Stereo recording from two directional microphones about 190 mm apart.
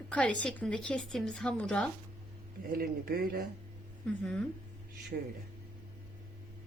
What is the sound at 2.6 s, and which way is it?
Speech, 50° right (ahead or behind).